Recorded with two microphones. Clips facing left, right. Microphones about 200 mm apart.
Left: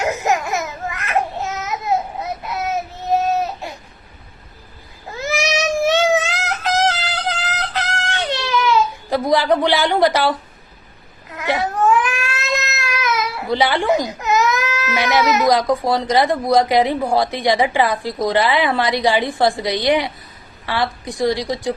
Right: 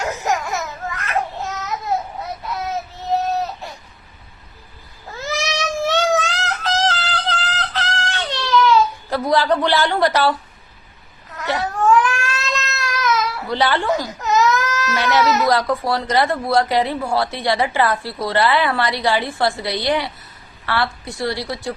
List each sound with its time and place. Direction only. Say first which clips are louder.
0.0 s laughter: left 3 dB; 20° left (ahead or behind)
1.6 s babbling: left 2 dB; 20° left (ahead or behind)
3.3 s baby cry: left 2 dB; 15° left (ahead or behind)
5.0 s a sound: left 4 dB; 20° left (ahead or behind)
11.4 s cat: left 1 dB; 15° left (ahead or behind)
20.7 s a woman's voice: left 1 dB; 15° left (ahead or behind)